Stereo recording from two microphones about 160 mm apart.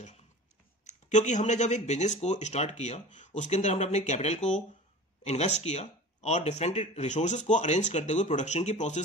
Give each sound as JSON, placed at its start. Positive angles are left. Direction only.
{"t": 0.8, "sound": "speech", "side_deg": 50}